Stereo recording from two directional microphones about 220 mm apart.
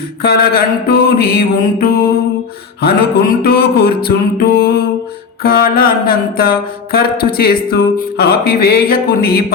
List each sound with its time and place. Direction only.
0.2 s speech: 45° left (ahead or behind)
3.4 s speech: 45° left (ahead or behind)